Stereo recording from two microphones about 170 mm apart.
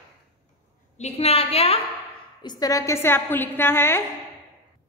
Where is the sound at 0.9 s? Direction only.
40° left (ahead or behind).